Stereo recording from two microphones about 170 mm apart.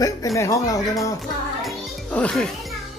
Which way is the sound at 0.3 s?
20° left (ahead or behind).